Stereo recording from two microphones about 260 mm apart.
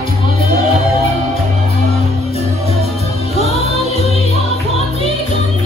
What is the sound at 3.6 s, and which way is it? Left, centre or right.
Music, right.